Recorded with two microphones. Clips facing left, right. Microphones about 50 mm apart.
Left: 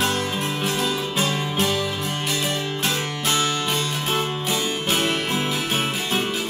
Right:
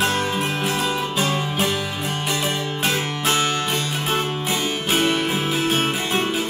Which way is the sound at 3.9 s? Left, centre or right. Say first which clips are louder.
Right 1 dB; centre.